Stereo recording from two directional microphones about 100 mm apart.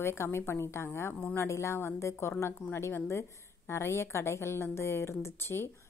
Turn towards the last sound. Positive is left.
turn(degrees=25)  # may be behind; listen again after turning